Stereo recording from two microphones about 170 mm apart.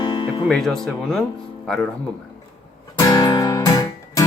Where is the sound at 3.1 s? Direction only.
25° left (ahead or behind).